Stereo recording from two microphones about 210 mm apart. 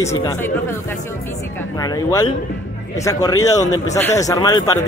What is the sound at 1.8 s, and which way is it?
A man's voice, 15° left (ahead or behind).